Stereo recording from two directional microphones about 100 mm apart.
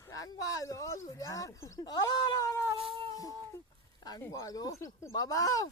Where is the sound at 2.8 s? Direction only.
65° right (ahead or behind).